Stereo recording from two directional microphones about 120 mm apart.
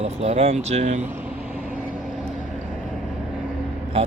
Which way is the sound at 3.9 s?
60° right (ahead or behind).